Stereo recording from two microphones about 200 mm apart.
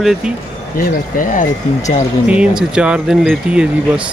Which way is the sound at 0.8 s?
45° left (ahead or behind).